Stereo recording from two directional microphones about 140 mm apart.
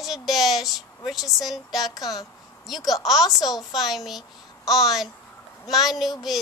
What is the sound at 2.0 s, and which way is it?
Speech, 25° left (ahead or behind).